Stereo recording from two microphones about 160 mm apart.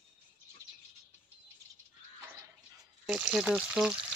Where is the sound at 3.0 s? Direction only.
5° right (ahead or behind).